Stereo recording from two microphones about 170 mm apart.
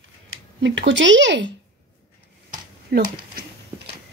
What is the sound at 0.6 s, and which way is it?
Speech, 90° right.